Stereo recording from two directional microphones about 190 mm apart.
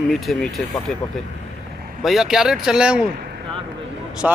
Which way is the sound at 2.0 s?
Centre (ahead or behind).